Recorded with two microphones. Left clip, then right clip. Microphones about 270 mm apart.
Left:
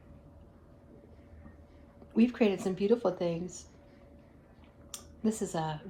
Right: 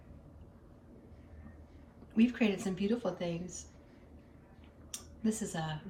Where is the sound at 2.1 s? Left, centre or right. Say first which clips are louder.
Left 4 dB; centre.